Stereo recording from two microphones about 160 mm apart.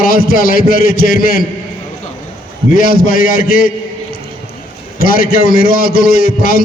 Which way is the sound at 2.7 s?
65° left (ahead or behind).